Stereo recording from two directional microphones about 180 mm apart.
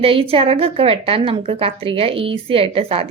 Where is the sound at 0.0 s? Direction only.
30° right (ahead or behind).